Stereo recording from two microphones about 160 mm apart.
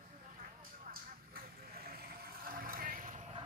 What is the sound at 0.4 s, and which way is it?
Vehicle, 60° right (ahead or behind).